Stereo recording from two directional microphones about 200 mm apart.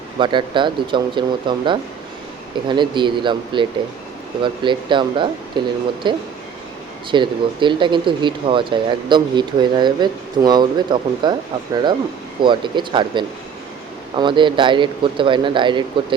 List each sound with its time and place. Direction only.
0.2 s speech: 25° right (ahead or behind)
12.4 s speech: 25° right (ahead or behind)